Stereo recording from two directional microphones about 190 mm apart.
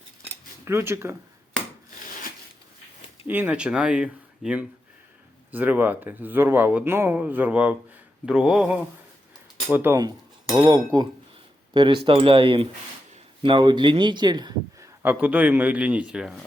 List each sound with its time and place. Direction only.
0.6 s speech: 15° right (ahead or behind)
3.2 s speech: 10° right (ahead or behind)
15.0 s speech: 5° right (ahead or behind)